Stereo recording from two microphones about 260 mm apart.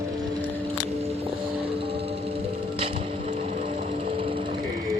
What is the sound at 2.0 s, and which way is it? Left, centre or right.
Music, right.